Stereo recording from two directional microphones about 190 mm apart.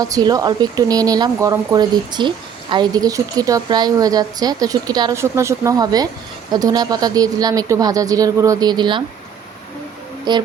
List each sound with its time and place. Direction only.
0.0 s speech: 20° right (ahead or behind)
10.3 s speech: 20° right (ahead or behind)